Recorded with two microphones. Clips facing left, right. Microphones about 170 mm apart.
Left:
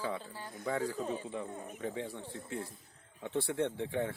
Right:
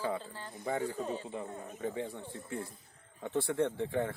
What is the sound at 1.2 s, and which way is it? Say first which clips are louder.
Speech: even; 25° right (ahead or behind).